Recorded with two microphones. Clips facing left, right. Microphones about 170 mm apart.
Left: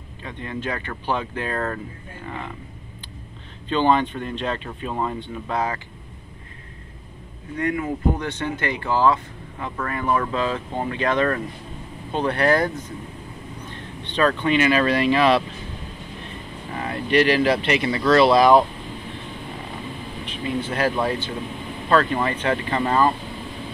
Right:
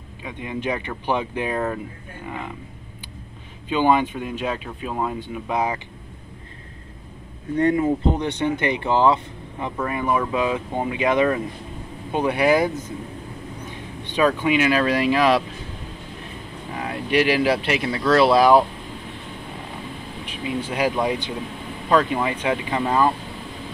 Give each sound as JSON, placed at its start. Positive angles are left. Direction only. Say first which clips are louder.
{"t": 0.2, "sound": "speech", "louder": "right 2 dB", "side_deg": -10}
{"t": 3.6, "sound": "speech", "louder": "right 1 dB", "side_deg": -10}
{"t": 7.5, "sound": "speech", "louder": "right 6 dB", "side_deg": -30}
{"t": 8.1, "sound": "speech", "louder": "right 3 dB", "side_deg": -20}
{"t": 16.7, "sound": "speech", "louder": "left 1 dB", "side_deg": -5}
{"t": 20.2, "sound": "speech", "louder": "left 1 dB", "side_deg": -10}